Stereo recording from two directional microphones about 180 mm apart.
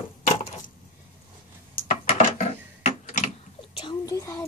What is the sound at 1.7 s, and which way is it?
Coin, 50° left (ahead or behind).